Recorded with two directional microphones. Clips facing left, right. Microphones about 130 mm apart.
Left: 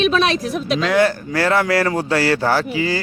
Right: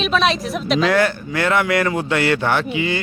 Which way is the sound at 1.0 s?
35° left (ahead or behind).